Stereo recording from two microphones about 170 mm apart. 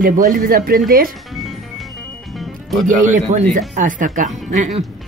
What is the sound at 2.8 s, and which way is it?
Speech, 50° right (ahead or behind).